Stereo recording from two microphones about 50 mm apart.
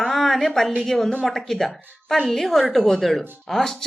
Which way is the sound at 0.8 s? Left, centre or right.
Centre.